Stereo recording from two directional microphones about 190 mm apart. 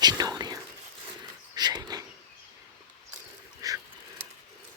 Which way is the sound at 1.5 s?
20° right (ahead or behind).